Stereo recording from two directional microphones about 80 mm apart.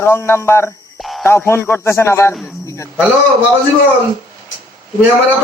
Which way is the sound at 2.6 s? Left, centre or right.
Left.